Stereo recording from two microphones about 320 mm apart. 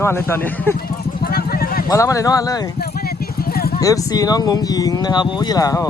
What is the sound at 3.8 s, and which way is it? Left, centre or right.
A man's voice, centre.